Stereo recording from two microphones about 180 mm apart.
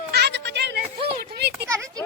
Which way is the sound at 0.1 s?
65° right (ahead or behind).